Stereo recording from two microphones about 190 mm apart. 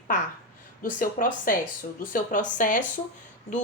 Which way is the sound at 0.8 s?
45° left (ahead or behind).